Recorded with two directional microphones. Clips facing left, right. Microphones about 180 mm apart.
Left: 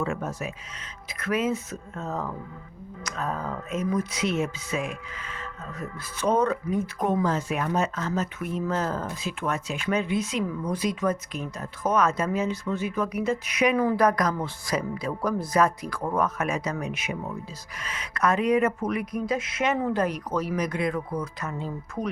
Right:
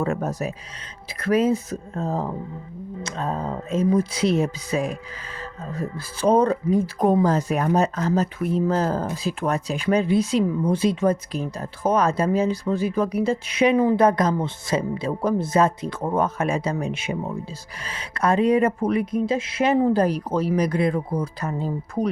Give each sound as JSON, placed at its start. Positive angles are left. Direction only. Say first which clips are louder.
{"t": 0.0, "sound": "speech", "louder": "right 5 dB", "side_deg": -40}